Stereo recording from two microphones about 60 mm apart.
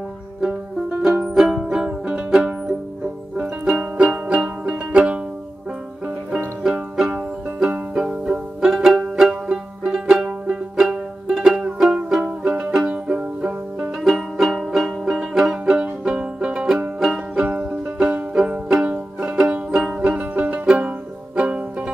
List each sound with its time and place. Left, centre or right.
1.3 s music: centre
6.6 s music: centre
12.2 s music: right
14.0 s music: centre
18.9 s music: right